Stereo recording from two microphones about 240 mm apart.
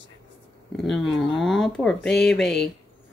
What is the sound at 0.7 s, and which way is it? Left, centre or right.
Speech, centre.